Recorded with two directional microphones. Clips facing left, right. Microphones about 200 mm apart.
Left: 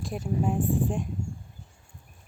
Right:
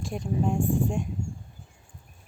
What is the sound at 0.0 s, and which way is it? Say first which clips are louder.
Speech: even; 5° left (ahead or behind).